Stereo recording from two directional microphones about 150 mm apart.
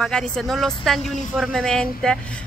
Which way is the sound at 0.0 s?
5° left (ahead or behind).